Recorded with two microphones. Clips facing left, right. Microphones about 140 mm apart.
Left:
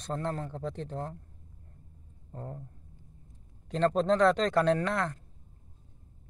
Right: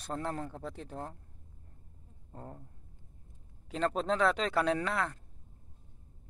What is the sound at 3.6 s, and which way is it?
Speech, 5° right (ahead or behind).